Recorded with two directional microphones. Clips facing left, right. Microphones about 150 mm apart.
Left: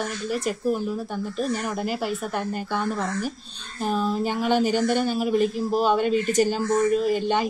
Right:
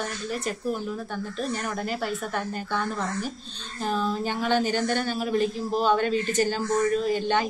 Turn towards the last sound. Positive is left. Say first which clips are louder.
# left 2 dB
turn(degrees=5)  # may be behind; listen again after turning